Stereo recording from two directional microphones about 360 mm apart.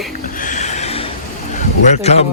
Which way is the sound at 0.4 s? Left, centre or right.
Centre.